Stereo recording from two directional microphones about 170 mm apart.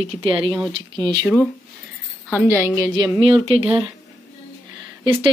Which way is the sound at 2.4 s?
15° right (ahead or behind).